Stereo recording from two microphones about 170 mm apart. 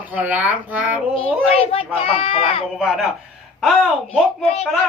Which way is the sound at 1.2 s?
35° left (ahead or behind).